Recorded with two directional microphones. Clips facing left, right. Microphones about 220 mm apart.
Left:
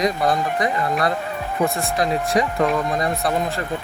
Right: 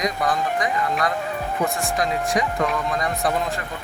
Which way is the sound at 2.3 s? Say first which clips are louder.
Left 4 dB; 30° left (ahead or behind).